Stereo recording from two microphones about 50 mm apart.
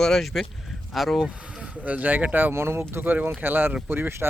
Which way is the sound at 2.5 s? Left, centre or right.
Right.